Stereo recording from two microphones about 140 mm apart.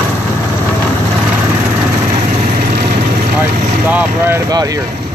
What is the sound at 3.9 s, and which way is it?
Vehicle, 10° right (ahead or behind).